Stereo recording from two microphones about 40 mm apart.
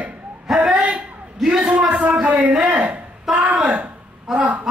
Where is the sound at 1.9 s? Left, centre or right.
Right.